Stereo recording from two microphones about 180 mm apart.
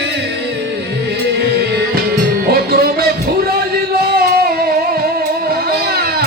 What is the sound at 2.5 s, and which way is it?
Music, 55° right (ahead or behind).